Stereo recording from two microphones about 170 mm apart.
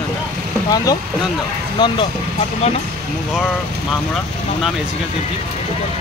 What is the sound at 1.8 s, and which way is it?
Speech, 25° left (ahead or behind).